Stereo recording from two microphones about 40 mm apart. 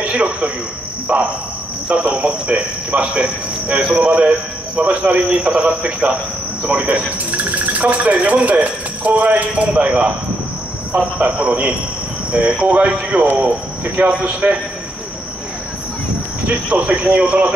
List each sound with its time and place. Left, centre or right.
0.0 s a man's voice: right
16.6 s speech: right